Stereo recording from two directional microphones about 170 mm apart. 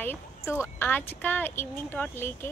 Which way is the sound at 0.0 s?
15° left (ahead or behind).